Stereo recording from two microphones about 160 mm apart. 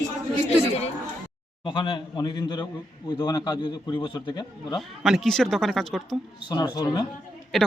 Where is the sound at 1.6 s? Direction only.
30° left (ahead or behind).